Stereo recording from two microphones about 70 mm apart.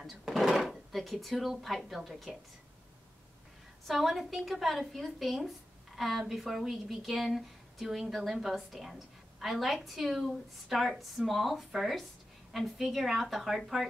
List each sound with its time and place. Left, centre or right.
0.0 s speech: centre
3.8 s speech: centre